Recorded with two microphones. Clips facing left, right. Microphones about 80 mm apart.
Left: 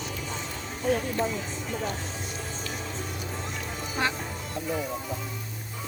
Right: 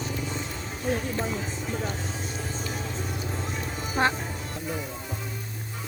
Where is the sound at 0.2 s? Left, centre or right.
Centre.